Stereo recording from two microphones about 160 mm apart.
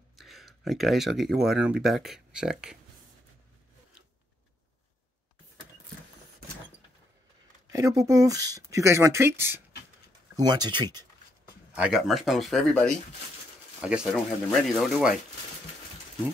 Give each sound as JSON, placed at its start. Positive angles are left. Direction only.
{"t": 0.1, "sound": "speech", "side_deg": 0}
{"t": 7.7, "sound": "speech", "side_deg": -20}
{"t": 11.7, "sound": "speech", "side_deg": -5}